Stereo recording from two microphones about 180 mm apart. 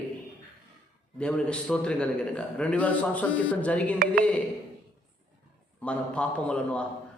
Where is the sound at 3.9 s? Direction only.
50° right (ahead or behind).